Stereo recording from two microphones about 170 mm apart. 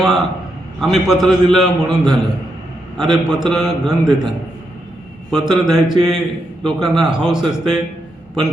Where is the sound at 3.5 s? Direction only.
5° right (ahead or behind).